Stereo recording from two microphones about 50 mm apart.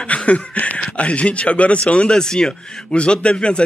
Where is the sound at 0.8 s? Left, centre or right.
Left.